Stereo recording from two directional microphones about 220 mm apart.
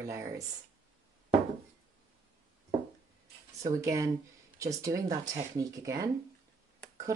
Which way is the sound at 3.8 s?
15° right (ahead or behind).